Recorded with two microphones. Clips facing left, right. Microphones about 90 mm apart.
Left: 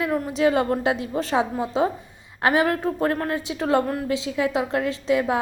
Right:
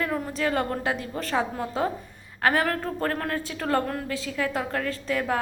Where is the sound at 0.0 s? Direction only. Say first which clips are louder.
Left 4 dB; 5° left (ahead or behind).